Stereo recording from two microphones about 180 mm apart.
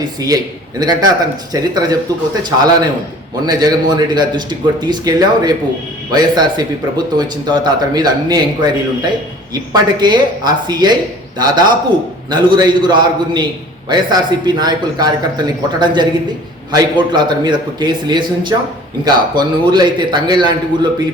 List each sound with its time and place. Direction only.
0.0 s a man's voice: 20° right (ahead or behind)